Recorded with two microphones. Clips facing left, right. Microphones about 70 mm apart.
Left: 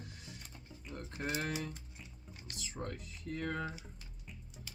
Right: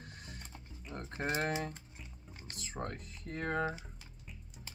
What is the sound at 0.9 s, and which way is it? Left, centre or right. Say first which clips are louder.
Speech: right 3 dB; right.